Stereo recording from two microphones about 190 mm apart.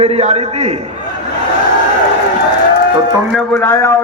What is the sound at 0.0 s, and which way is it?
Speech, 35° right (ahead or behind).